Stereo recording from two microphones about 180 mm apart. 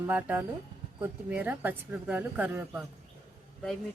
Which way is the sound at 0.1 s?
10° right (ahead or behind).